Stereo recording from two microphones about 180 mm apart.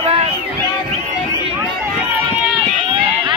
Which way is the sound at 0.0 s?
35° right (ahead or behind).